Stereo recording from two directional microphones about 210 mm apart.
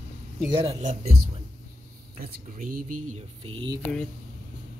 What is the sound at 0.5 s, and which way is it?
Music, 30° right (ahead or behind).